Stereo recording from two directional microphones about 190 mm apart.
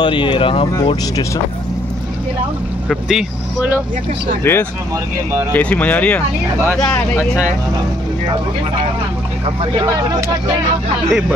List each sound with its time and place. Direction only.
0.0 s speech: 25° left (ahead or behind)
2.9 s speech: centre (ahead or behind)
4.4 s speech: 15° left (ahead or behind)
9.6 s speech: 20° right (ahead or behind)
11.1 s speech: 5° right (ahead or behind)